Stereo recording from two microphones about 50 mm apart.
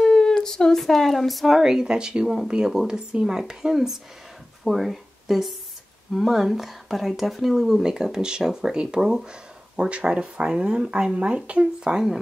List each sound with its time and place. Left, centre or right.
0.0 s speech: centre